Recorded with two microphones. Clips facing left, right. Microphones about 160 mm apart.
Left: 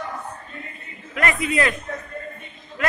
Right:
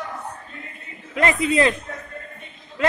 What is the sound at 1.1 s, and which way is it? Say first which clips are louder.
Speech: right 3 dB; 25° right (ahead or behind).